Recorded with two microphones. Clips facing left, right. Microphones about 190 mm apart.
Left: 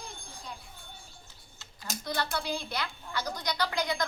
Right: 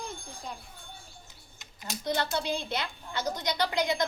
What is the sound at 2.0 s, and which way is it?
A woman's voice, 20° right (ahead or behind).